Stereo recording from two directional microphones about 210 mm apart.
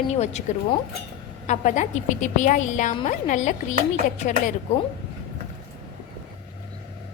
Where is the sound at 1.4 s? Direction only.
35° left (ahead or behind).